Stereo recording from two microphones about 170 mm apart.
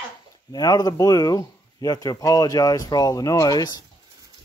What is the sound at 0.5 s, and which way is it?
Speech, 25° left (ahead or behind).